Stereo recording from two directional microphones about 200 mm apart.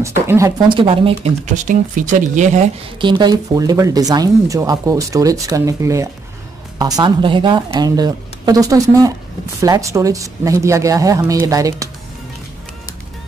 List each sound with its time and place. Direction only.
0.0 s speech: 15° right (ahead or behind)
0.7 s speech: 25° right (ahead or behind)
3.0 s speech: 25° right (ahead or behind)